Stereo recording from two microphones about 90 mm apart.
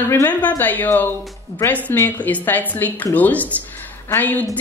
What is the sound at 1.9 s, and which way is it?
A woman's voice, 20° left (ahead or behind).